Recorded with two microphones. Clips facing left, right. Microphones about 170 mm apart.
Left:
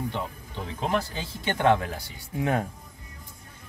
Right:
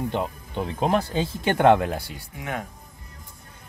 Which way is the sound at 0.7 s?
55° right (ahead or behind).